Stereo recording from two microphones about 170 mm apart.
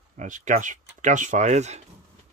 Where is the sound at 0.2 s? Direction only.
45° right (ahead or behind).